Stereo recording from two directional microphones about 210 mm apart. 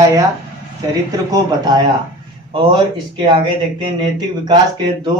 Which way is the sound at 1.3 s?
20° right (ahead or behind).